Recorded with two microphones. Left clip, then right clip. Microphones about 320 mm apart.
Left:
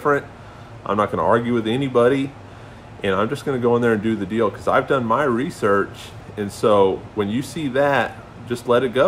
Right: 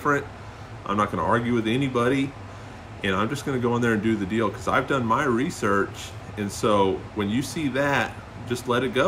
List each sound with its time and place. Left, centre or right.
0.8 s speech: centre